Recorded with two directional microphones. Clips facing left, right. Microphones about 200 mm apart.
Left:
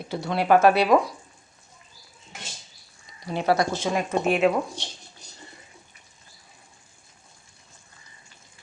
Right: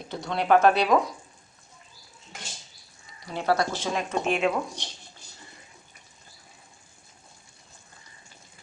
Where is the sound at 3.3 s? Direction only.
15° left (ahead or behind).